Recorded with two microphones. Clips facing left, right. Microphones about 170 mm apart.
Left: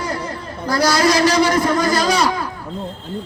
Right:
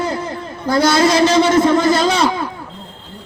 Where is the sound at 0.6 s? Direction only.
25° right (ahead or behind).